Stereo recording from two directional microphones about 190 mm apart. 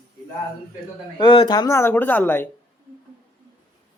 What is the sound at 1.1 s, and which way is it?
Speech, 25° left (ahead or behind).